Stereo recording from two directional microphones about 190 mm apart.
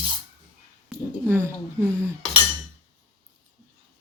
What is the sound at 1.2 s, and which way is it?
Speech, 15° right (ahead or behind).